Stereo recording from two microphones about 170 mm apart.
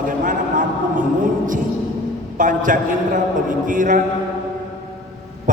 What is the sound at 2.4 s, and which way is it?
A man's voice, 50° right (ahead or behind).